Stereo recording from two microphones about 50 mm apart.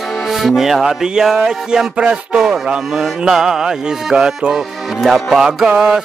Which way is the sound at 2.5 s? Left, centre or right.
Centre.